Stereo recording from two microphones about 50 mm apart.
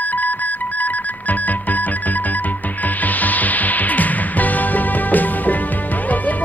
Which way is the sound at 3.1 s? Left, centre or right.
Left.